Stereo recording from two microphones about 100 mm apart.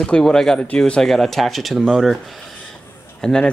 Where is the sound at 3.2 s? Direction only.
5° left (ahead or behind).